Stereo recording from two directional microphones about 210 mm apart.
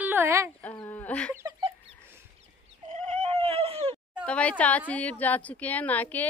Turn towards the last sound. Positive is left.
turn(degrees=10)  # may be behind; listen again after turning